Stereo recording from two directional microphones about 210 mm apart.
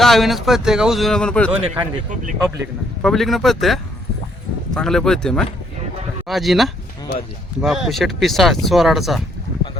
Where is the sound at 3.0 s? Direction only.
Centre (ahead or behind).